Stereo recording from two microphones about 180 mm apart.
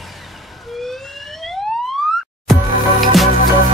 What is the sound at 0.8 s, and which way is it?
Emergency vehicle, centre (ahead or behind).